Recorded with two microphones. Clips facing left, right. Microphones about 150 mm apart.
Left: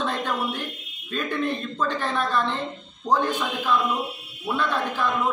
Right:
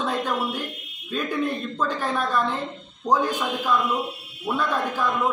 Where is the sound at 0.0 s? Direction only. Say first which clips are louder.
Right 1 dB; 5° right (ahead or behind).